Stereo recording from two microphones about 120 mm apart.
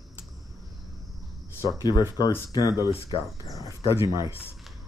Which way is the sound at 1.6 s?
40° left (ahead or behind).